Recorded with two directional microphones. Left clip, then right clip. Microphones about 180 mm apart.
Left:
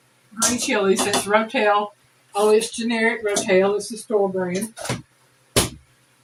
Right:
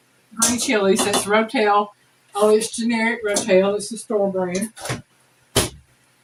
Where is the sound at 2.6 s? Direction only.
15° right (ahead or behind).